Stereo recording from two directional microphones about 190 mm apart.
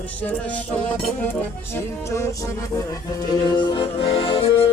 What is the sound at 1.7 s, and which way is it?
Music, 15° left (ahead or behind).